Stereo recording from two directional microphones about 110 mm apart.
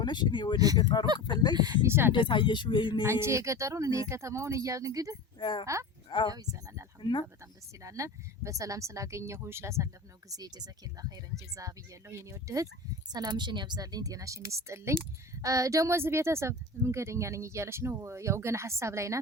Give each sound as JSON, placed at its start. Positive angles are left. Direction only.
{"t": 0.0, "sound": "speech", "side_deg": 45}
{"t": 1.5, "sound": "speech", "side_deg": -40}
{"t": 1.9, "sound": "speech", "side_deg": -20}
{"t": 2.1, "sound": "speech", "side_deg": 45}
{"t": 3.1, "sound": "speech", "side_deg": -25}
{"t": 5.4, "sound": "speech", "side_deg": 45}
{"t": 6.3, "sound": "speech", "side_deg": -35}
{"t": 7.0, "sound": "speech", "side_deg": 45}
{"t": 7.8, "sound": "speech", "side_deg": -30}
{"t": 13.1, "sound": "speech", "side_deg": -40}